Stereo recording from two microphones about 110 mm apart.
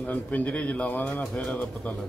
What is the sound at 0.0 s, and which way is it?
A man's voice, 15° left (ahead or behind).